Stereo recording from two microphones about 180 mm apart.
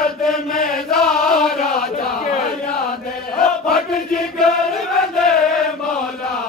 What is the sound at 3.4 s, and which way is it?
Chant, centre (ahead or behind).